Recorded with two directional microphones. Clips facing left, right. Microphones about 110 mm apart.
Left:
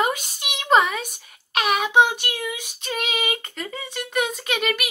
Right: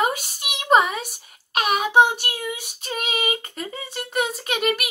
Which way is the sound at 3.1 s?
35° right (ahead or behind).